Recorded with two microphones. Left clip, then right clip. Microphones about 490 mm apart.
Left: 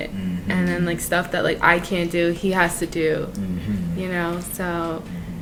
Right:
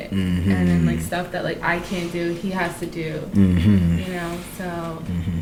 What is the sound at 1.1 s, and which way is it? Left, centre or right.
Speech, left.